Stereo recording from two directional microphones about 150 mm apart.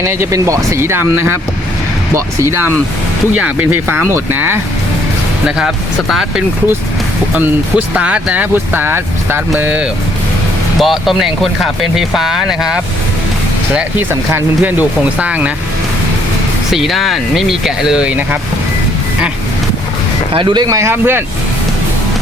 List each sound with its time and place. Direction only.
0.0 s speech: 20° right (ahead or behind)
5.5 s speech: 5° right (ahead or behind)
10.8 s speech: centre (ahead or behind)
16.7 s speech: centre (ahead or behind)
20.3 s speech: 30° right (ahead or behind); by 21.2 s 15° right (ahead or behind)